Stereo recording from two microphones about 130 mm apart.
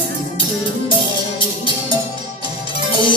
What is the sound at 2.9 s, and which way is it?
Music, 40° left (ahead or behind).